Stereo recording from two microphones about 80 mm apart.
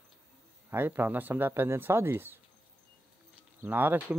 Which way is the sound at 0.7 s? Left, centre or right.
Right.